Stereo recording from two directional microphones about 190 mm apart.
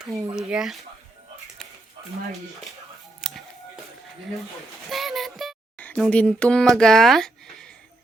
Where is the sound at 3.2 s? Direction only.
Centre (ahead or behind).